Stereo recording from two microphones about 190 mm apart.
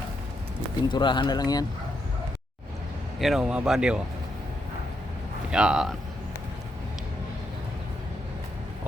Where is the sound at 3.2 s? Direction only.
Centre (ahead or behind).